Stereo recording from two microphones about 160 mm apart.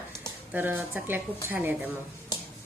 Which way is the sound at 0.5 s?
10° right (ahead or behind).